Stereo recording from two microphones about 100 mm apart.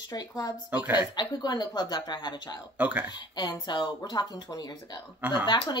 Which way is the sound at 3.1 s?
45° left (ahead or behind).